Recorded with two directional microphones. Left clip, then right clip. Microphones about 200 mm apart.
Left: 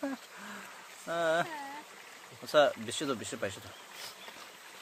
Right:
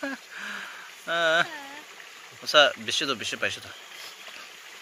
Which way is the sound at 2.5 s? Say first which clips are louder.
Right 7 dB; 5° left (ahead or behind).